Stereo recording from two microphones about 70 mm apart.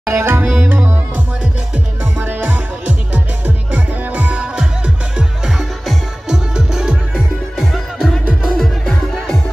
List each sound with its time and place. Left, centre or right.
0.0 s tabla: right
0.7 s music: right
8.5 s music: centre